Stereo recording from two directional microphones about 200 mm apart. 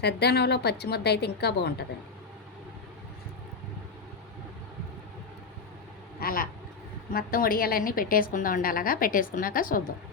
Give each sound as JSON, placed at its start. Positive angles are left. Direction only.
{"t": 0.0, "sound": "a woman's voice", "side_deg": 55}
{"t": 6.1, "sound": "vehicle", "side_deg": 45}
{"t": 7.1, "sound": "a woman's voice", "side_deg": 45}